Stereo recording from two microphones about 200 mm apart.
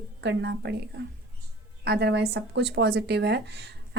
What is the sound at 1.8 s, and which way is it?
A woman's voice, 55° right (ahead or behind).